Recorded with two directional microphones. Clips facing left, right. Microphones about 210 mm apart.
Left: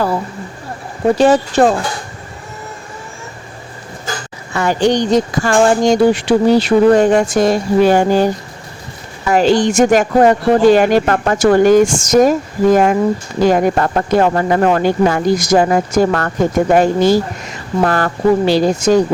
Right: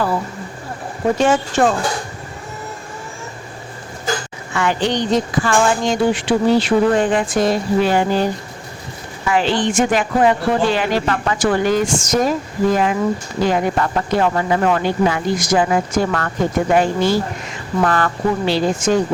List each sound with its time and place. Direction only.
1.2 s speech: 35° left (ahead or behind)
4.5 s speech: 40° left (ahead or behind)
9.3 s speech: 40° left (ahead or behind)